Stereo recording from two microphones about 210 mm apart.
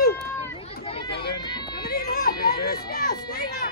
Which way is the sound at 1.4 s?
20° left (ahead or behind).